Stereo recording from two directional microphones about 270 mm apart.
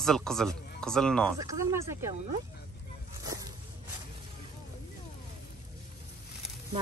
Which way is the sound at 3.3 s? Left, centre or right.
Centre.